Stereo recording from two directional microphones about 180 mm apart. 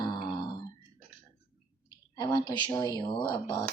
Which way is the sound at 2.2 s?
20° left (ahead or behind).